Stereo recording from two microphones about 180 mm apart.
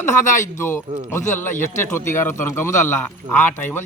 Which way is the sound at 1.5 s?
45° left (ahead or behind).